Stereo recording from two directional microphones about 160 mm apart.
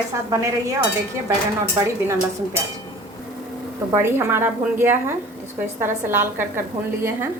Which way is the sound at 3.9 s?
15° right (ahead or behind).